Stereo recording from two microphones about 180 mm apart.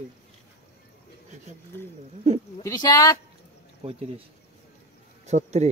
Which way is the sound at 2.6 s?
20° left (ahead or behind).